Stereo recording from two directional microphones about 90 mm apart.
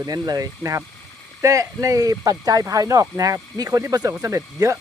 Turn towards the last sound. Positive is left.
turn(degrees=-35)  # may be behind; listen again after turning